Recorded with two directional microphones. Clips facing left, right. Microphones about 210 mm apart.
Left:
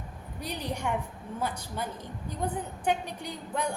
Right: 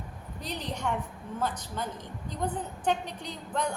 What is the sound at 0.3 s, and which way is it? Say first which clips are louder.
A woman's voice: left 2 dB; 10° left (ahead or behind).